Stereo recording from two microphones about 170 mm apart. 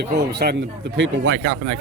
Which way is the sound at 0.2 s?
75° right (ahead or behind).